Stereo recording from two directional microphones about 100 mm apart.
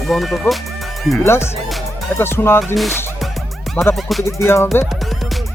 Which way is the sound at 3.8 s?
15° left (ahead or behind).